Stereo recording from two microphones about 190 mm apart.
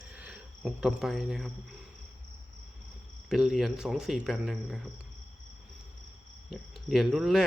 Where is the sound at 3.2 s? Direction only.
Centre (ahead or behind).